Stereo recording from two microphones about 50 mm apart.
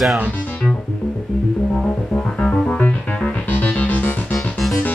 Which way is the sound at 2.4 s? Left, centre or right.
Centre.